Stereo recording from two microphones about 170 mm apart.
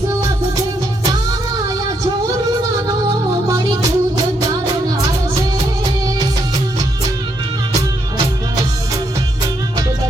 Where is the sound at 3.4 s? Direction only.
20° right (ahead or behind).